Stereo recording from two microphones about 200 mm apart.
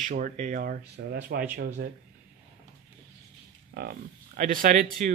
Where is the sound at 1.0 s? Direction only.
55° right (ahead or behind).